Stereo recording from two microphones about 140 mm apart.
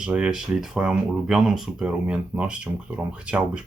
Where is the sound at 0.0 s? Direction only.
5° right (ahead or behind).